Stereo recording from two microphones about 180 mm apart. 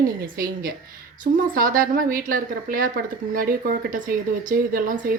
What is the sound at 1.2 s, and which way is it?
A woman's voice, 50° right (ahead or behind).